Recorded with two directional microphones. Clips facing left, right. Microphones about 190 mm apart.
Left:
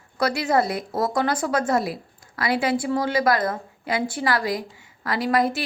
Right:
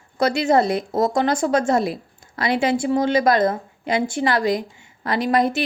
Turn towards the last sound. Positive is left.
turn(degrees=-25)  # may be behind; listen again after turning